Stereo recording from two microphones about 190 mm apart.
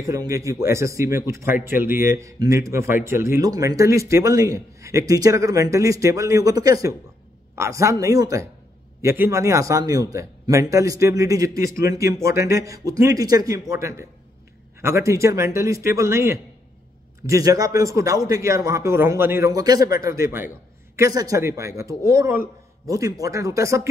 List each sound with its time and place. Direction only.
0.0 s speech: 15° right (ahead or behind)